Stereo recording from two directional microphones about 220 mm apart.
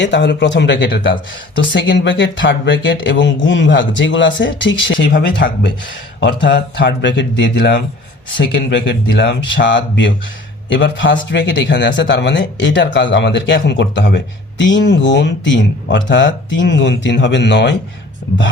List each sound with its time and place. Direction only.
0.0 s speech: 55° left (ahead or behind)